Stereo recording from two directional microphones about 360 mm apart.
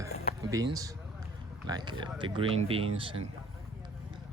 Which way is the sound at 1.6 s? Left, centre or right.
Centre.